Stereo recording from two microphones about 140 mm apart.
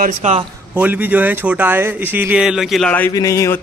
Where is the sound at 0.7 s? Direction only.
10° right (ahead or behind).